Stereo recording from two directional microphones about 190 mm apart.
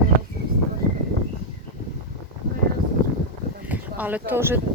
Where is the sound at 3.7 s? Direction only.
10° right (ahead or behind).